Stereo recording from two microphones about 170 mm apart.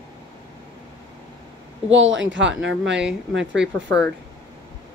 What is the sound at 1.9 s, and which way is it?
Speech, 90° right.